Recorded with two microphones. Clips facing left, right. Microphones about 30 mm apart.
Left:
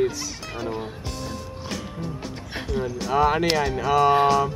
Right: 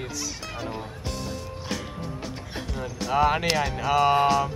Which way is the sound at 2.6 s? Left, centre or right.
Centre.